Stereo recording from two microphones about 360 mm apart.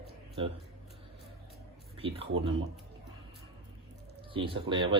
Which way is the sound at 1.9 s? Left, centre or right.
Centre.